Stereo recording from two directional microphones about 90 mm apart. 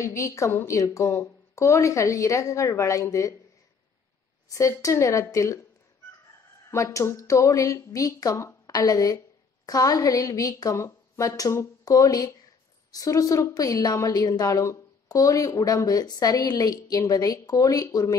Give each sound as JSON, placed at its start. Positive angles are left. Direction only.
{"t": 0.0, "sound": "a woman's voice", "side_deg": 35}
{"t": 4.5, "sound": "a woman's voice", "side_deg": 35}
{"t": 6.7, "sound": "a woman's voice", "side_deg": 35}